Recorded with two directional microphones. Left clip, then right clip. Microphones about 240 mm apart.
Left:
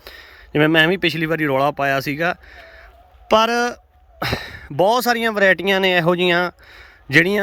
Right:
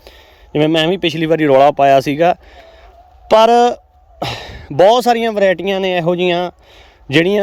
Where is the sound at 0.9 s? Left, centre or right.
Centre.